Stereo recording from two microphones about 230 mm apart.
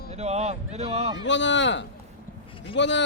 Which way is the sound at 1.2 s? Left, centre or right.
Left.